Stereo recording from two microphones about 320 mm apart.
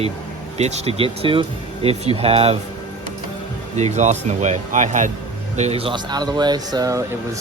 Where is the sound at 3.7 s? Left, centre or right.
Right.